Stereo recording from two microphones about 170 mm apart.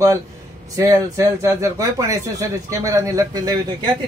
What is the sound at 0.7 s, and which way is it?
Speech, 20° right (ahead or behind).